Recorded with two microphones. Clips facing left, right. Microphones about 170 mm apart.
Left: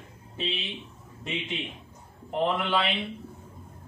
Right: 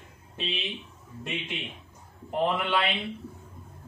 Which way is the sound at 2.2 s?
Centre (ahead or behind).